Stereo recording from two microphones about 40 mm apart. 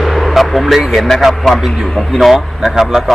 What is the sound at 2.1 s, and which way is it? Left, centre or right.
Speech, centre.